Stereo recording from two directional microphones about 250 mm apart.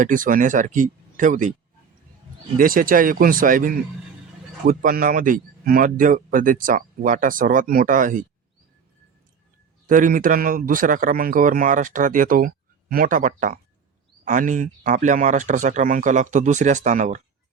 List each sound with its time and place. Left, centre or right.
0.0 s a man's voice: right
2.6 s a man's voice: right
9.9 s a man's voice: right